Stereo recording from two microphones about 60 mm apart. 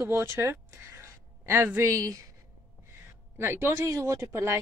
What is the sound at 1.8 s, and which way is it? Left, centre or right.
Speech, right.